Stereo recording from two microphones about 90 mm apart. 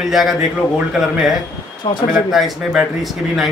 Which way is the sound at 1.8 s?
55° left (ahead or behind).